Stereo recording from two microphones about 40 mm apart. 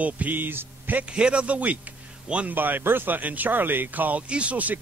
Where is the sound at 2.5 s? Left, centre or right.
Right.